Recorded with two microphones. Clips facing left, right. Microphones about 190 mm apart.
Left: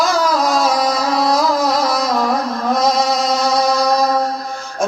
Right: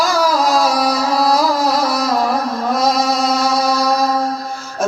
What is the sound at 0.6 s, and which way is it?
Music, 20° left (ahead or behind).